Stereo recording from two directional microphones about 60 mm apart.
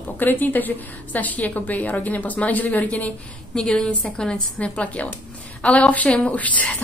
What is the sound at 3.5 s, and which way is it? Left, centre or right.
A woman's voice, centre.